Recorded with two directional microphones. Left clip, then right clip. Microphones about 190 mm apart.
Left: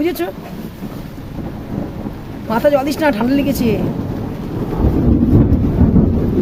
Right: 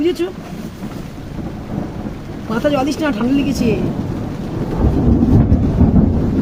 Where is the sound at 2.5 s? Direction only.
30° left (ahead or behind).